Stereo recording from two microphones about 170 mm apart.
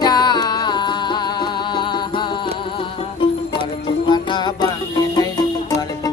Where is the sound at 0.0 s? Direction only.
25° left (ahead or behind).